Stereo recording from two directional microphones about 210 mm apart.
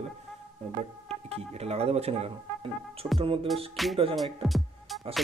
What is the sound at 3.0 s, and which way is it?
Music, 15° right (ahead or behind).